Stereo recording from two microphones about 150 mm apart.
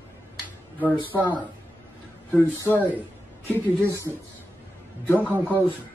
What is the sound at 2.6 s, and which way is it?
Speech, 10° left (ahead or behind).